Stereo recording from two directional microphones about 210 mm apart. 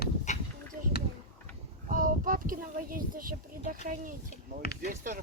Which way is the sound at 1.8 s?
40° right (ahead or behind).